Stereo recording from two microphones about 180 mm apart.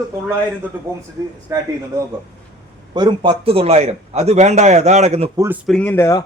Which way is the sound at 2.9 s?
25° right (ahead or behind).